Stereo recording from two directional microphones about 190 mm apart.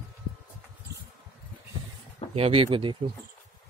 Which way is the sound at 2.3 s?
30° right (ahead or behind).